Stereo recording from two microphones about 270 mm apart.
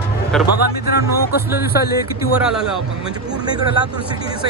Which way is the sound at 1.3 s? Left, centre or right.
Left.